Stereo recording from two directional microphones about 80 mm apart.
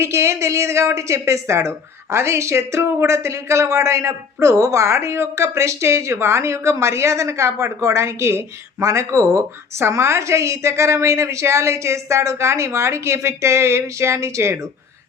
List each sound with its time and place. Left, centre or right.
0.0 s a woman's voice: right